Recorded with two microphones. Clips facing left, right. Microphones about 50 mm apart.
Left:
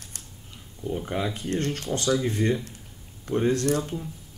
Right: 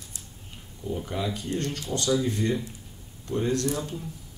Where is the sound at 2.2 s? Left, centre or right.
Left.